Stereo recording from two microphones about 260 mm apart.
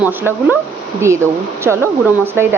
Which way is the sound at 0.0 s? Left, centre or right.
Centre.